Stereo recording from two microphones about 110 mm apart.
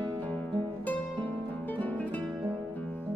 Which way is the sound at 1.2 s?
45° right (ahead or behind).